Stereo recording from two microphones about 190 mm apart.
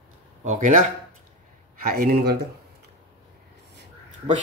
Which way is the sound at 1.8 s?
50° right (ahead or behind).